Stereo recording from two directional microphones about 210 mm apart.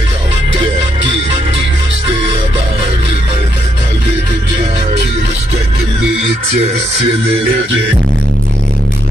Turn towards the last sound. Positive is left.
turn(degrees=-30)  # may be behind; listen again after turning